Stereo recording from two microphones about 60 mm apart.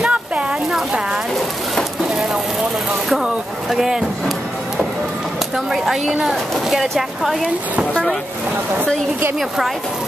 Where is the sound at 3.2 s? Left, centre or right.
Centre.